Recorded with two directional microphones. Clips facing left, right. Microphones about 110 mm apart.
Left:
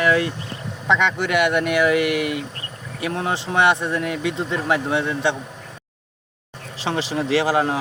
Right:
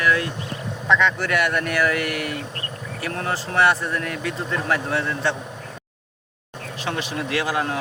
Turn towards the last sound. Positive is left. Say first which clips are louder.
# left 5 dB
turn(degrees=25)  # may be behind; listen again after turning